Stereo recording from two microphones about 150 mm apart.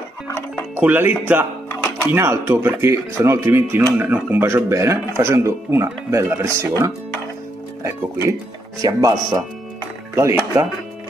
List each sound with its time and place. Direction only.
0.7 s speech: 10° right (ahead or behind)
8.8 s speech: 25° right (ahead or behind)